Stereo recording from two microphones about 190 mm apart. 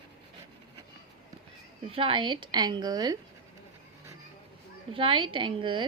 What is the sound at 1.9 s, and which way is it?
A woman's voice, 25° right (ahead or behind).